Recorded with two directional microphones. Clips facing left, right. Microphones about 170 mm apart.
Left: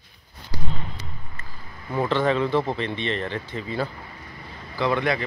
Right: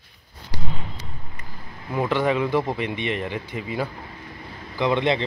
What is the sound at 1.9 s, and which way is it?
Speech, 10° right (ahead or behind).